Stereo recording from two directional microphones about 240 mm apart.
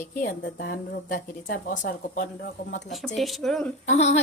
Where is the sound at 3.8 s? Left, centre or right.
Left.